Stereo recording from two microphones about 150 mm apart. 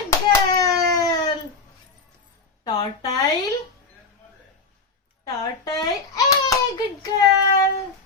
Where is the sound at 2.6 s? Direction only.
25° left (ahead or behind).